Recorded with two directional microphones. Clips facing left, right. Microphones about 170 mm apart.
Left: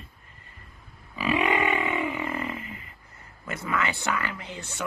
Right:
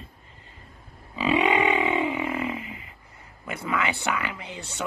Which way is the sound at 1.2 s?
20° right (ahead or behind).